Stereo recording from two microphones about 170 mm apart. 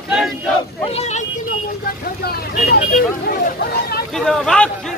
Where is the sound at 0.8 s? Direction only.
40° left (ahead or behind).